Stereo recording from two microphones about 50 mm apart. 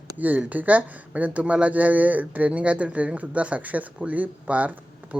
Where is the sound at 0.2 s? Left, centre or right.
Right.